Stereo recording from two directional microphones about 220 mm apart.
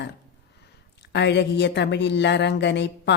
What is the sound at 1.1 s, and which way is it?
Speech, 50° left (ahead or behind).